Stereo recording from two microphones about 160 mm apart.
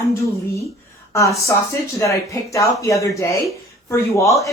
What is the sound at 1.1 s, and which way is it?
Speech, 20° left (ahead or behind).